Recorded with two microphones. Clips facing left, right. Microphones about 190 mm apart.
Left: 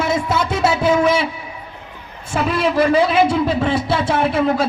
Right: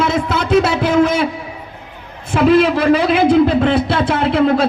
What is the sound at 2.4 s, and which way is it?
A man's voice, 60° right (ahead or behind).